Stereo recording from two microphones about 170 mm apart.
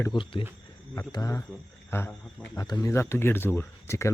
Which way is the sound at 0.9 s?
20° left (ahead or behind).